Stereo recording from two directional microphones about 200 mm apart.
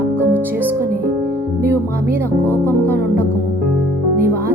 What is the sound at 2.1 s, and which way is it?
Speech, 10° right (ahead or behind).